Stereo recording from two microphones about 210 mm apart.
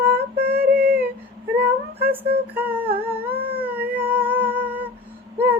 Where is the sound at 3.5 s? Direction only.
10° right (ahead or behind).